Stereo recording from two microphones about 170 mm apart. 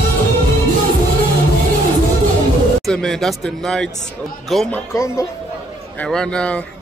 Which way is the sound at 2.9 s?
5° left (ahead or behind).